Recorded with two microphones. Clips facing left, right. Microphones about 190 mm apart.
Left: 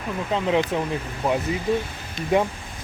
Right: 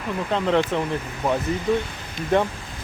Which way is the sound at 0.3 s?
5° left (ahead or behind).